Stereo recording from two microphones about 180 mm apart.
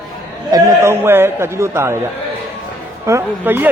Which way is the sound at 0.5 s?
15° right (ahead or behind).